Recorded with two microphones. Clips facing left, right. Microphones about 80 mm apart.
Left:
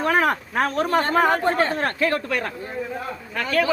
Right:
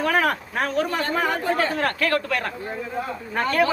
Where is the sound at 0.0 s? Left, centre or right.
Left.